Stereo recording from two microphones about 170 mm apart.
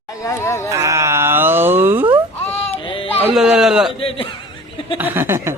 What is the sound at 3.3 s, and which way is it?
Speech, 5° right (ahead or behind).